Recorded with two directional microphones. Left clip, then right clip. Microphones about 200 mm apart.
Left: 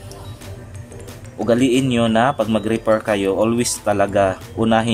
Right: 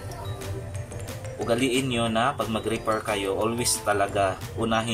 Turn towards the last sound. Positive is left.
turn(degrees=40)  # may be behind; listen again after turning